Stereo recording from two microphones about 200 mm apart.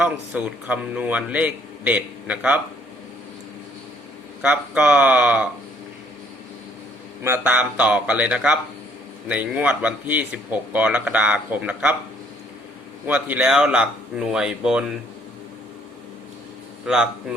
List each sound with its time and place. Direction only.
0.0 s speech: 5° right (ahead or behind)
4.4 s speech: 5° right (ahead or behind)
7.2 s speech: 10° right (ahead or behind)
13.1 s speech: 5° right (ahead or behind)
16.8 s speech: 5° right (ahead or behind)